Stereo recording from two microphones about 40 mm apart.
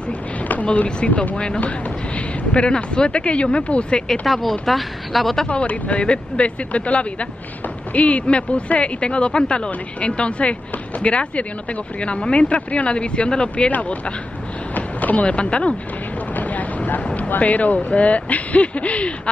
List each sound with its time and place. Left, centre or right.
0.4 s a sound: left
0.8 s speech: left
4.3 s speech: centre
5.5 s speech: left
16.3 s boat: left
17.0 s speech: left